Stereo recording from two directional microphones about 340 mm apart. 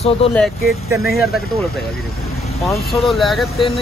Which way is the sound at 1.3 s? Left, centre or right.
Centre.